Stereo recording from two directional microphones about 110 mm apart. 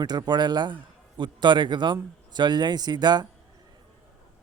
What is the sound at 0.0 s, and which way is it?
Speech, 40° right (ahead or behind).